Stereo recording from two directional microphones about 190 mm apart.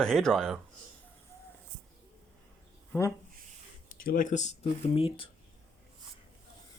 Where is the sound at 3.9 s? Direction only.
45° left (ahead or behind); by 5.3 s 30° left (ahead or behind).